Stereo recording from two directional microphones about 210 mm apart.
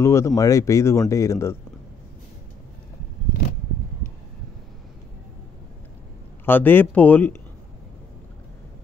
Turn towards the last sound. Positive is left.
turn(degrees=10)  # may be behind; listen again after turning